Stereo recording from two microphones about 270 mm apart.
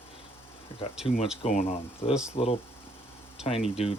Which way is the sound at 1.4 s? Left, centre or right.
Left.